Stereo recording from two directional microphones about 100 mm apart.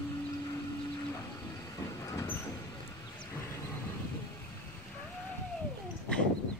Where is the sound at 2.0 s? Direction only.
30° left (ahead or behind).